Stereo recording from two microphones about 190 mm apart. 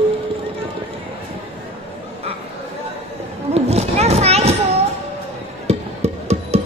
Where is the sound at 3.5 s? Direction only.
35° right (ahead or behind).